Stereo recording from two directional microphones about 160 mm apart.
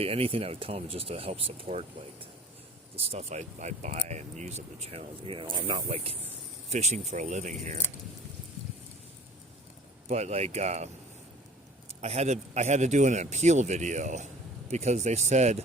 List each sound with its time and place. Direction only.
0.0 s speech: 35° right (ahead or behind)
10.1 s speech: 40° right (ahead or behind)
11.9 s speech: 40° right (ahead or behind)